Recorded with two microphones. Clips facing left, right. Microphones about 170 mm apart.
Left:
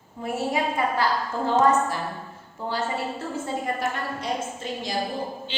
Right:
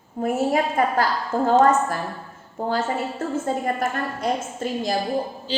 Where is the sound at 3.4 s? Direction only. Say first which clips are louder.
Right 2 dB; 50° right (ahead or behind).